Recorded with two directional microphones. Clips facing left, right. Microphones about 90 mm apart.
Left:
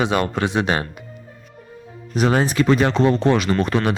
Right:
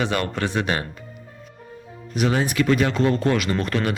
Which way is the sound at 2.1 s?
35° left (ahead or behind).